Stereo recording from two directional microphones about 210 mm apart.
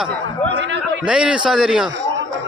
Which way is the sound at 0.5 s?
60° right (ahead or behind).